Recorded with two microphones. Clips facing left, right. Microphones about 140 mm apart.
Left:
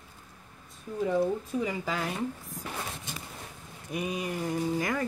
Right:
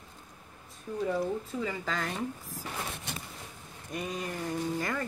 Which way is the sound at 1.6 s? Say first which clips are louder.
Left 2 dB; 10° left (ahead or behind).